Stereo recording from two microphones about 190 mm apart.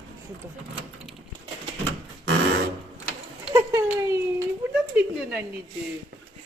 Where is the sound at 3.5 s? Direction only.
15° right (ahead or behind).